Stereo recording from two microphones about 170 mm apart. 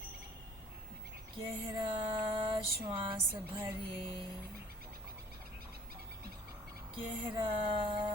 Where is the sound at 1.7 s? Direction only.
25° right (ahead or behind).